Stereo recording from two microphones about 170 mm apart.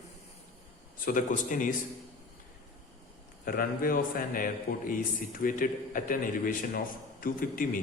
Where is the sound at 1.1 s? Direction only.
50° left (ahead or behind).